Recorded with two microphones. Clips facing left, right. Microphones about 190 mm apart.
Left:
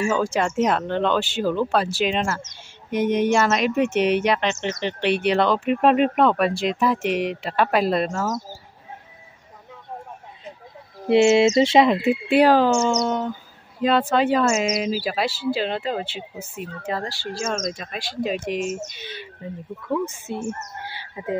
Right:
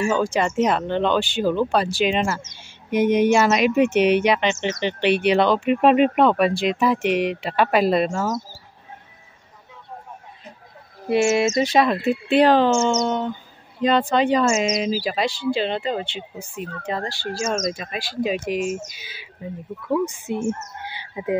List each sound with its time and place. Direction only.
0.0 s speech: 5° left (ahead or behind)
11.1 s speech: 25° left (ahead or behind); by 20.3 s 10° right (ahead or behind)
20.4 s chicken: 20° right (ahead or behind)